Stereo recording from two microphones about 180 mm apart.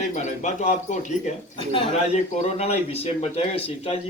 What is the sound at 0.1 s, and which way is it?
Speech, 40° left (ahead or behind).